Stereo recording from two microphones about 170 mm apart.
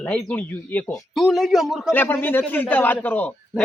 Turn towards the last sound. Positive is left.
turn(degrees=10)  # may be behind; listen again after turning